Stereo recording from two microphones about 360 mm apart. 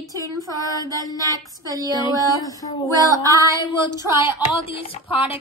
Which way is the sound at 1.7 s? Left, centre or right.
Centre.